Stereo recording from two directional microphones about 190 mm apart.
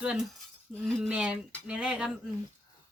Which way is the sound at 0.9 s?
5° right (ahead or behind).